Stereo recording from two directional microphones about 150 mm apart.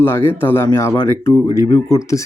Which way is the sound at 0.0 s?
15° left (ahead or behind).